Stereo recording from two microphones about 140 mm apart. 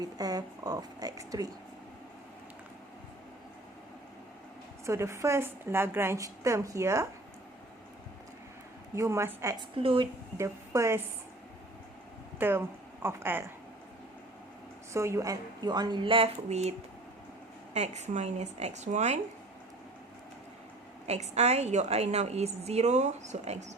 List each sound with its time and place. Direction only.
0.0 s a woman's voice: 25° right (ahead or behind)
4.9 s a woman's voice: 20° right (ahead or behind)
9.0 s a woman's voice: 20° right (ahead or behind)
9.6 s a woman's voice: 40° right (ahead or behind)
10.3 s a woman's voice: 20° right (ahead or behind)
12.4 s speech: 15° right (ahead or behind)
14.9 s a woman's voice: 20° right (ahead or behind); by 16.7 s 50° right (ahead or behind)
17.7 s speech: 55° right (ahead or behind)
21.1 s a woman's voice: 50° right (ahead or behind)